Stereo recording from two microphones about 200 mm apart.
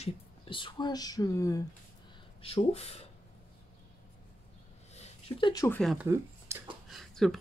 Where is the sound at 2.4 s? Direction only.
30° left (ahead or behind).